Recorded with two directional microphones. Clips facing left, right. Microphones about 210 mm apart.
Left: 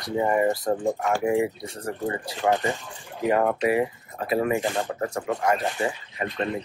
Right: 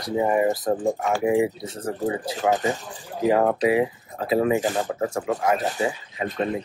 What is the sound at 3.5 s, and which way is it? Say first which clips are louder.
Speech: right 2 dB; 25° right (ahead or behind).